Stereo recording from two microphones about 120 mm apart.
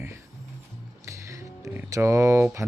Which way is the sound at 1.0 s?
25° right (ahead or behind).